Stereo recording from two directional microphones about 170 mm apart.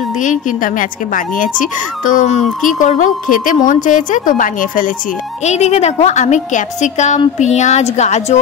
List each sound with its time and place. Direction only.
0.2 s a woman's voice: 50° left (ahead or behind)